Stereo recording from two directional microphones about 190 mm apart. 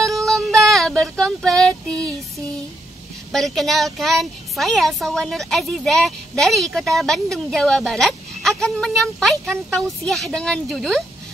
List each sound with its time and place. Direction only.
0.0 s child singing: centre (ahead or behind)
3.3 s a child's voice: centre (ahead or behind)